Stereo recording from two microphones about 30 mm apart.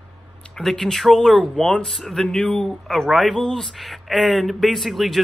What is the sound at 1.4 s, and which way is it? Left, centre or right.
Speech, left.